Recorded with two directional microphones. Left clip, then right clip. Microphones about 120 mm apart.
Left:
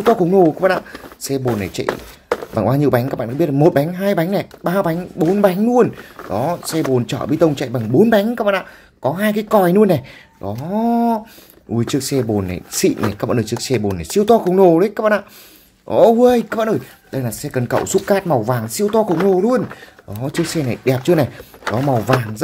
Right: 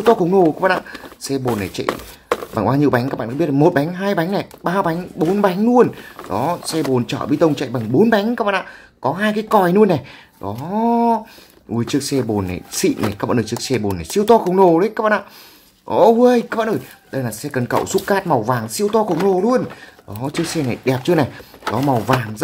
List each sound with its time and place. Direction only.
0.1 s speech: 50° left (ahead or behind)
10.7 s speech: 65° left (ahead or behind)
11.7 s speech: 55° left (ahead or behind); by 19.6 s 90° left
20.2 s speech: 55° left (ahead or behind)